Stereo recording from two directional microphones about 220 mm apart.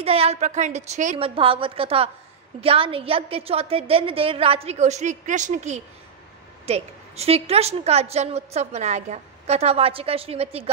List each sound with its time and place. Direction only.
0.0 s a woman's voice: 25° right (ahead or behind)